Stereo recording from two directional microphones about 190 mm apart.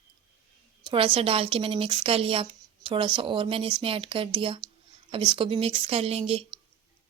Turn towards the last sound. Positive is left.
turn(degrees=-30)  # may be behind; listen again after turning